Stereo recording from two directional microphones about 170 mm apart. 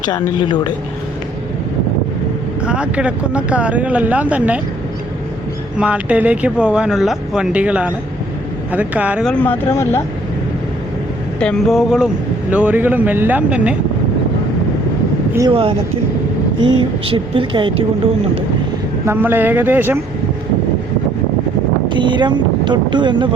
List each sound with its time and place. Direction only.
0.0 s a woman's voice: 25° left (ahead or behind)
2.6 s speech: 5° right (ahead or behind)
5.8 s speech: 5° right (ahead or behind)
9.2 s speech: 10° left (ahead or behind)
11.3 s speech: 5° left (ahead or behind)
15.4 s speech: 30° right (ahead or behind)
19.0 s speech: 15° right (ahead or behind)
21.8 s speech: 30° right (ahead or behind)